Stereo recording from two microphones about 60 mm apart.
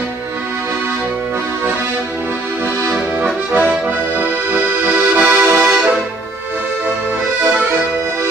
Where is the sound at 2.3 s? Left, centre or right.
Right.